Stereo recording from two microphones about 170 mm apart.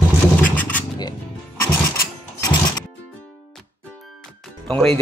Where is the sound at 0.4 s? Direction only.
10° left (ahead or behind).